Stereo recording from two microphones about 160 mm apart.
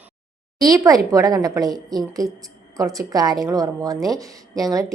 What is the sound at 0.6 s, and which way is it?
A woman's voice, 20° right (ahead or behind).